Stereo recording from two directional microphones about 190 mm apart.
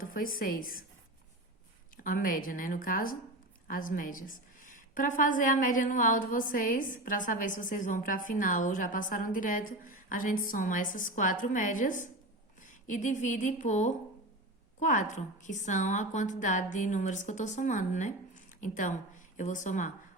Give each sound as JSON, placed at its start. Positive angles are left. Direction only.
{"t": 0.0, "sound": "a woman's voice", "side_deg": 50}
{"t": 2.0, "sound": "a woman's voice", "side_deg": 50}